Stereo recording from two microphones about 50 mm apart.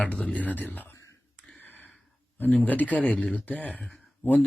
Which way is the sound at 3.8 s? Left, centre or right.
Centre.